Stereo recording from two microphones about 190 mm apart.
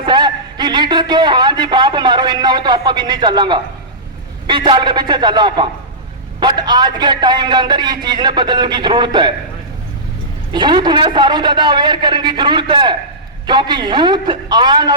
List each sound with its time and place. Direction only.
0.0 s a man's voice: 25° right (ahead or behind)
10.5 s a man's voice: 25° right (ahead or behind)